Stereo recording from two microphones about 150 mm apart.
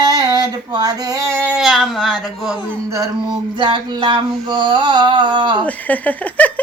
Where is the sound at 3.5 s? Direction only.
30° right (ahead or behind).